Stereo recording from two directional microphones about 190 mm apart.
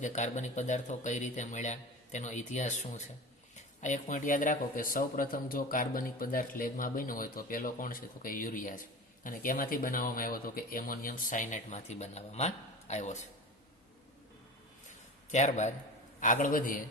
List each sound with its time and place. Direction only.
0.0 s speech: 40° left (ahead or behind)
15.3 s speech: 40° left (ahead or behind)